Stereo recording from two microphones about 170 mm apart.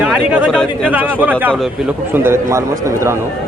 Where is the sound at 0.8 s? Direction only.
10° right (ahead or behind).